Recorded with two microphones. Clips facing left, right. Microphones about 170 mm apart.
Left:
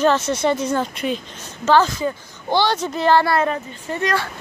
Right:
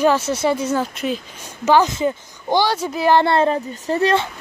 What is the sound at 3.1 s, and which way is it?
Speech, 25° right (ahead or behind).